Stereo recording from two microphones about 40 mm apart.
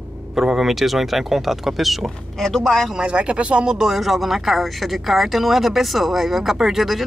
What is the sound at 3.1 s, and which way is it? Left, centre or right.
Speech, right.